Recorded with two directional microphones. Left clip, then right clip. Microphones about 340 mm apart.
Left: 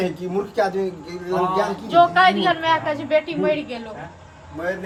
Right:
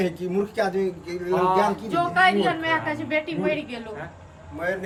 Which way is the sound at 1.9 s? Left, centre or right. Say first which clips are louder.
Left 8 dB; left.